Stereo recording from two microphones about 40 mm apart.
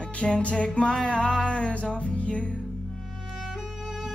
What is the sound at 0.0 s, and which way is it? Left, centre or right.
Music, left.